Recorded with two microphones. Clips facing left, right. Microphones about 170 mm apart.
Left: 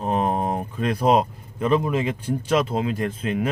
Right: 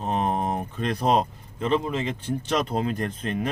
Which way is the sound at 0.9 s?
10° left (ahead or behind).